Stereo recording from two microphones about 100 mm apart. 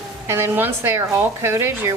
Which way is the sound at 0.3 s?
25° right (ahead or behind).